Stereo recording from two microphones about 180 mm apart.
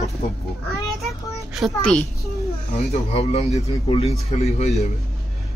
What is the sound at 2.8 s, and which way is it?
A man's voice, 35° left (ahead or behind).